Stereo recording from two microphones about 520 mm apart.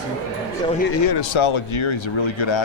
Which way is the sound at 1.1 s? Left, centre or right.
Left.